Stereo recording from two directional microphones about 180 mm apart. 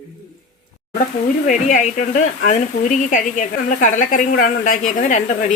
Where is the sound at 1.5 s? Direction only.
45° left (ahead or behind).